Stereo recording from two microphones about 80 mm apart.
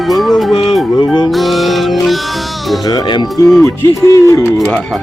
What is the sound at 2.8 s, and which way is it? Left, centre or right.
Speech, left.